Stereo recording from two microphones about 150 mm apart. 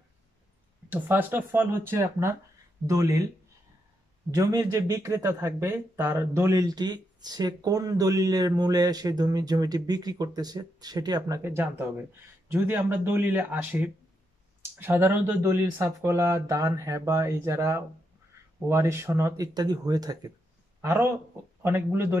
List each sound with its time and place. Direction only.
0.8 s speech: 10° right (ahead or behind)
4.3 s speech: 25° right (ahead or behind)